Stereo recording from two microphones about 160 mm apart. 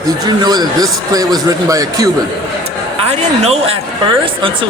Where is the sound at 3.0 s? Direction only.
40° right (ahead or behind).